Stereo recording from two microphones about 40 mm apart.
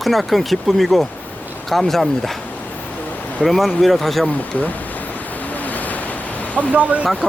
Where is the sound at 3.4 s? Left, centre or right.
Centre.